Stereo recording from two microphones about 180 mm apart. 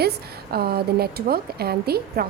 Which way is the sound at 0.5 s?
60° right (ahead or behind).